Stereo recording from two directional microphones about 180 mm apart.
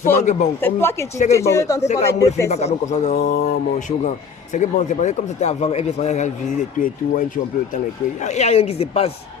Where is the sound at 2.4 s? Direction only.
35° left (ahead or behind).